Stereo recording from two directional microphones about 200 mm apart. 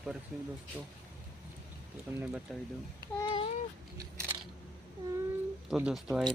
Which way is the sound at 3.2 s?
25° left (ahead or behind).